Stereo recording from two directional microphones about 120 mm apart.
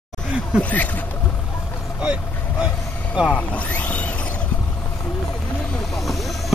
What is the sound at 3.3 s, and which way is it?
Speech, 10° left (ahead or behind).